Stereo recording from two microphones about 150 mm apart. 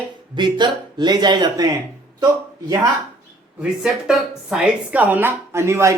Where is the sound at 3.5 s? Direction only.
5° right (ahead or behind).